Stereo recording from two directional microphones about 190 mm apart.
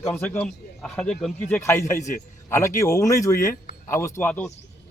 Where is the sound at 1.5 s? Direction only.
15° left (ahead or behind).